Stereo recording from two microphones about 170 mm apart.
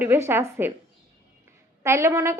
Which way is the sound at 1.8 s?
15° right (ahead or behind).